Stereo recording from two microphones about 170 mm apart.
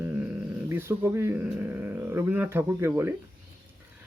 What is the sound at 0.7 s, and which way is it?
Speech, 15° right (ahead or behind).